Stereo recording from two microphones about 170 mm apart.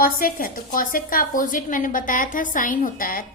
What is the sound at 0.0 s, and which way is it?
A woman's voice, 55° left (ahead or behind).